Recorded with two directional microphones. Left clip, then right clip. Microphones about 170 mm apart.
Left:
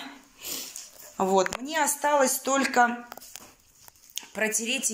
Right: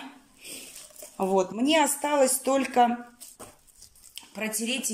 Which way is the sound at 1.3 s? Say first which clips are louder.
Right 3 dB; 15° right (ahead or behind).